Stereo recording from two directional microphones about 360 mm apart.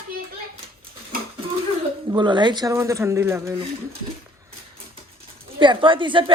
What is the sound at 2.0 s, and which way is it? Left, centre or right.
Speech, centre.